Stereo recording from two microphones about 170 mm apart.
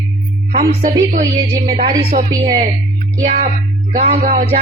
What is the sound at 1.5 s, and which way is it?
Music, 30° right (ahead or behind).